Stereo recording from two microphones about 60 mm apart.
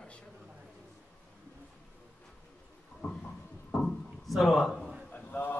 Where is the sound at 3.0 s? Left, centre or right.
Left.